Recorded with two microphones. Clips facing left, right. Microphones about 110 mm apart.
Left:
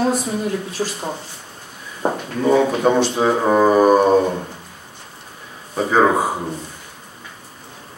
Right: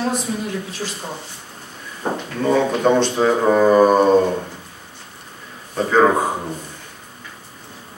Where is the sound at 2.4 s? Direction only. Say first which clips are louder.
Left 2 dB; 10° left (ahead or behind).